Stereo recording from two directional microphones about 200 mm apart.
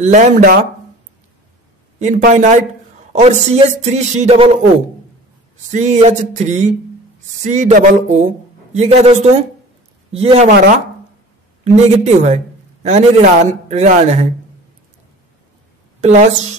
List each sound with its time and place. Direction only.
0.0 s a man's voice: 35° right (ahead or behind)
2.0 s a man's voice: 35° right (ahead or behind)
5.7 s a man's voice: 35° right (ahead or behind)
10.5 s speech: 50° right (ahead or behind)
11.6 s a man's voice: 35° right (ahead or behind)
16.0 s a woman's voice: 35° right (ahead or behind)